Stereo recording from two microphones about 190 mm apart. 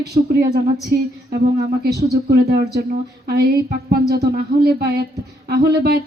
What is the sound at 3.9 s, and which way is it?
A woman's voice, 55° right (ahead or behind).